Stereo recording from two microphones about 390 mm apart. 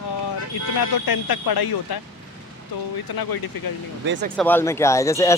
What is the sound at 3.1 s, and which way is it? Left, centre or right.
Speech, left.